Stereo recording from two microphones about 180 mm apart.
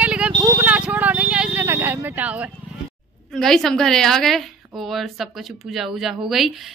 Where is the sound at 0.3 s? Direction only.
20° right (ahead or behind).